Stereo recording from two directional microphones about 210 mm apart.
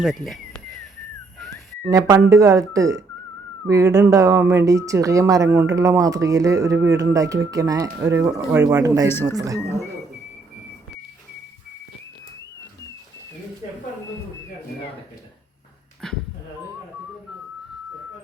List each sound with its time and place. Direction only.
0.0 s speech: centre (ahead or behind)
1.9 s speech: 15° right (ahead or behind)
16.0 s dog: 5° left (ahead or behind)